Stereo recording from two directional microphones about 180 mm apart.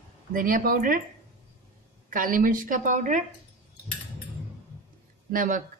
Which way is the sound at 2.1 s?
50° right (ahead or behind).